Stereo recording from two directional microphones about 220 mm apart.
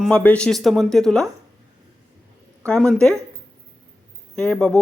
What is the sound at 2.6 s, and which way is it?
Speech, 5° left (ahead or behind).